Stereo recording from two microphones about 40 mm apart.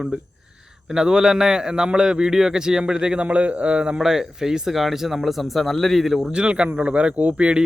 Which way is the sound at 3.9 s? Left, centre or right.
Centre.